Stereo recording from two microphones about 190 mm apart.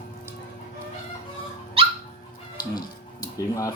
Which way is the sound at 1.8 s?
30° right (ahead or behind).